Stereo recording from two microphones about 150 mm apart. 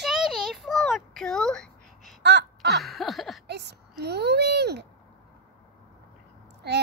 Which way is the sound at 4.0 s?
90° right.